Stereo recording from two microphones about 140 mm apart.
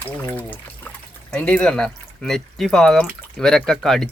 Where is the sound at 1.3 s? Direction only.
5° left (ahead or behind).